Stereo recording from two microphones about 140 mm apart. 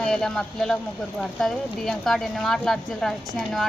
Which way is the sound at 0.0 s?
5° left (ahead or behind).